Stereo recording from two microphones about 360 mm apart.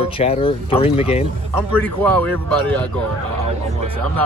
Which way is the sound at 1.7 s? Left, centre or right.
Centre.